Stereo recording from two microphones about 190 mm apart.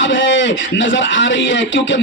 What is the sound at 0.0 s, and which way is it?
A man's voice, 80° left.